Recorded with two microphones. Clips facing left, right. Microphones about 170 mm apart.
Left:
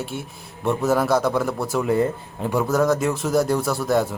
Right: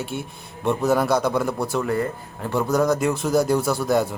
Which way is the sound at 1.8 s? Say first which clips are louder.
Left 3 dB; 20° left (ahead or behind).